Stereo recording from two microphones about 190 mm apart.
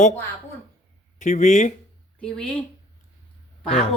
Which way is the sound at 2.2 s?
5° left (ahead or behind).